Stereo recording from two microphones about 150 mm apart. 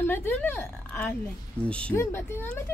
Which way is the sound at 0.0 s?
15° left (ahead or behind).